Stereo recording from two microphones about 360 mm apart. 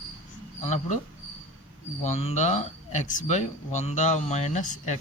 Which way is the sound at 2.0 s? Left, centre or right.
Centre.